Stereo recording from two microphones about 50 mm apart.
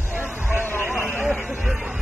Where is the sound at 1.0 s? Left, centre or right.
Centre.